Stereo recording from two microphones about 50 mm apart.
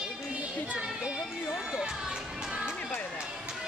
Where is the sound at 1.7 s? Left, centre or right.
Centre.